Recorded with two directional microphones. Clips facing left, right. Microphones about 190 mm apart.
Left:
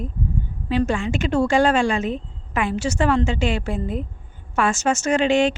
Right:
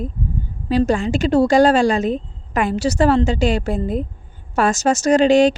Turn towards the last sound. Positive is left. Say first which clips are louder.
# right 5 dB
turn(degrees=-35)  # may be behind; listen again after turning